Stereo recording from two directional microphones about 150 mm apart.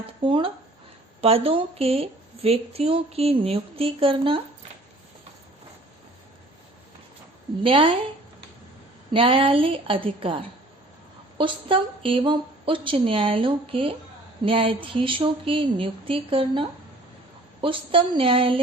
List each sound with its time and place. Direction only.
0.3 s a woman's voice: 35° right (ahead or behind)
7.6 s a woman's voice: 35° right (ahead or behind)
9.1 s a woman's voice: 35° right (ahead or behind)